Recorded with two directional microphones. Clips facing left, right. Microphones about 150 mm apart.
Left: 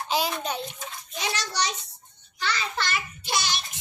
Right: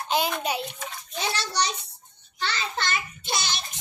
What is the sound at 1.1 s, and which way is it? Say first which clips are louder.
A child's voice: right 2 dB; 30° right (ahead or behind).